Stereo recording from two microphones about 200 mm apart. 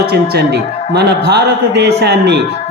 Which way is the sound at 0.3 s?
55° right (ahead or behind).